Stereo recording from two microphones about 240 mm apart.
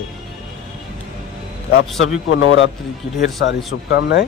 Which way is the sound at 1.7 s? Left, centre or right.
Left.